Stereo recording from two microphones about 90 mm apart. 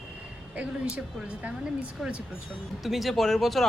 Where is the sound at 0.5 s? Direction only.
15° right (ahead or behind).